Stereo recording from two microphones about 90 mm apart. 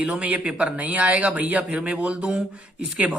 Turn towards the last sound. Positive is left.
turn(degrees=-15)  # may be behind; listen again after turning